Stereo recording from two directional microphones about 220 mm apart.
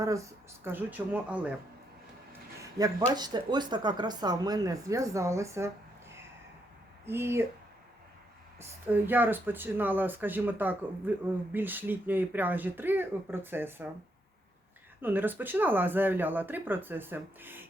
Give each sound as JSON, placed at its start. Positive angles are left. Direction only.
{"t": 0.6, "sound": "speech", "side_deg": -10}
{"t": 2.8, "sound": "speech", "side_deg": -15}
{"t": 8.9, "sound": "speech", "side_deg": -10}
{"t": 15.0, "sound": "speech", "side_deg": -10}